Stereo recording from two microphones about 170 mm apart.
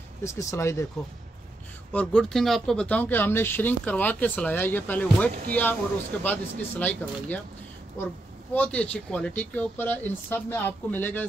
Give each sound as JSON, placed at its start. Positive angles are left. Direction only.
{"t": 0.2, "sound": "speech", "side_deg": 20}
{"t": 1.9, "sound": "speech", "side_deg": 5}
{"t": 8.5, "sound": "speech", "side_deg": 10}